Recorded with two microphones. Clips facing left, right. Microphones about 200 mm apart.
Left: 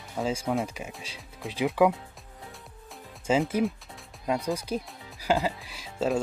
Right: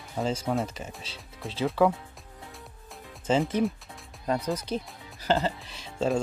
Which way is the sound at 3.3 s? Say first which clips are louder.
Even; 10° left (ahead or behind).